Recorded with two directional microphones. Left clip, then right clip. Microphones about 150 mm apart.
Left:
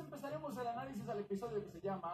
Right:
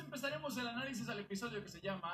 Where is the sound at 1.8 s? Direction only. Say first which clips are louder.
Left 1 dB; 10° right (ahead or behind).